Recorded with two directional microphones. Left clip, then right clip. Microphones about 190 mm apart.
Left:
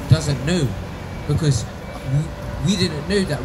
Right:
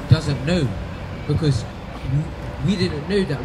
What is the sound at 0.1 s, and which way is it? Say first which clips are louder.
Speech: even; 5° left (ahead or behind).